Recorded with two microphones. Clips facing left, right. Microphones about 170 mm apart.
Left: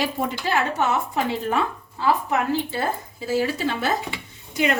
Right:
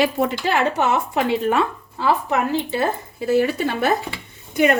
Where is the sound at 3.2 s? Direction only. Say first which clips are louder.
Right 5 dB; 60° right (ahead or behind).